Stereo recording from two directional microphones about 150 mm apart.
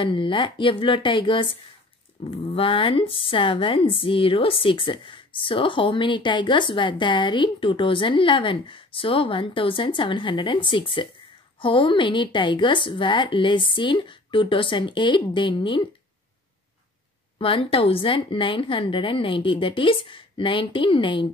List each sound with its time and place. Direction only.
0.0 s a woman's voice: 35° left (ahead or behind)
17.4 s a woman's voice: 35° left (ahead or behind)